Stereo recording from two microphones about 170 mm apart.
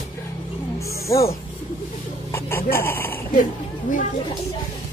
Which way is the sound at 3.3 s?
50° left (ahead or behind).